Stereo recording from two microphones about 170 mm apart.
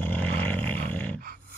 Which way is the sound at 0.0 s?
10° left (ahead or behind).